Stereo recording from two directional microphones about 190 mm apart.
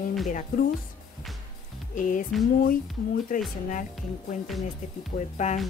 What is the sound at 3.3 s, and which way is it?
Music, 45° left (ahead or behind).